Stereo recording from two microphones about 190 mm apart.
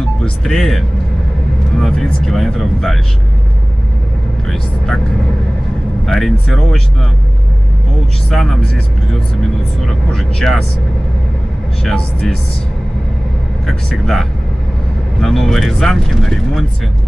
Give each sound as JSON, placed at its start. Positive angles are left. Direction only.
{"t": 0.2, "sound": "speech", "side_deg": 0}
{"t": 4.5, "sound": "speech", "side_deg": 0}
{"t": 6.0, "sound": "speech", "side_deg": 0}
{"t": 8.3, "sound": "speech", "side_deg": 0}
{"t": 11.8, "sound": "speech", "side_deg": 5}
{"t": 13.7, "sound": "speech", "side_deg": 0}